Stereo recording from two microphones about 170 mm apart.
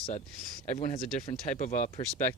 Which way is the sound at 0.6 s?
45° left (ahead or behind).